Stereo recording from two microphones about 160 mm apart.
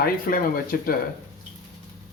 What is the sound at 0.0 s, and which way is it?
Speech, 60° left (ahead or behind).